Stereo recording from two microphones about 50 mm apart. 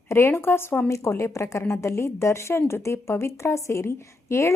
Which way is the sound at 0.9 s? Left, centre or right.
Left.